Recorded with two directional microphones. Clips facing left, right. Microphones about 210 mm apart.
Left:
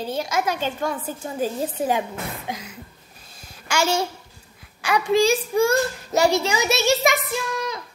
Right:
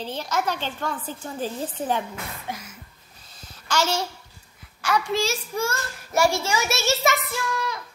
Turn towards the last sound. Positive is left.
turn(degrees=20)  # may be behind; listen again after turning